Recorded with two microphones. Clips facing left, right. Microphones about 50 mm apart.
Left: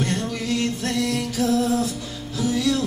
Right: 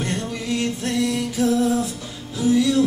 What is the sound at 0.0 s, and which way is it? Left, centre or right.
Music, centre.